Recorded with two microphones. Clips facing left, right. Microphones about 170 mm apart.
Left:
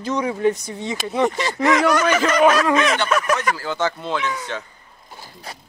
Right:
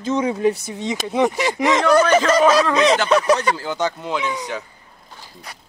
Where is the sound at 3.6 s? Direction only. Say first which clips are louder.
Even; 15° right (ahead or behind).